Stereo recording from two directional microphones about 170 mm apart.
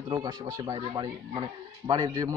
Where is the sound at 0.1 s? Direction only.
25° right (ahead or behind).